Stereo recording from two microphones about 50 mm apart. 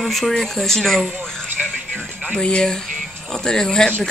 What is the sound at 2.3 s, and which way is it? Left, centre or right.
Speech, centre.